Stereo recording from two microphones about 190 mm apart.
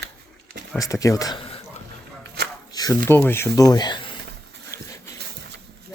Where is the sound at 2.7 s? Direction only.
20° left (ahead or behind).